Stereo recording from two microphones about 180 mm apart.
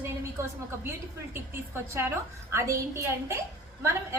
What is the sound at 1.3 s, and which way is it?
A woman's voice, 15° right (ahead or behind).